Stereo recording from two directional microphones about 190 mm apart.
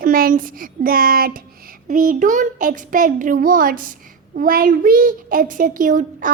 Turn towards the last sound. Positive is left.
turn(degrees=-45)  # may be behind; listen again after turning